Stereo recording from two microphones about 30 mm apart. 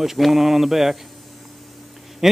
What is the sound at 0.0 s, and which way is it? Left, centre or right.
Mantra, centre.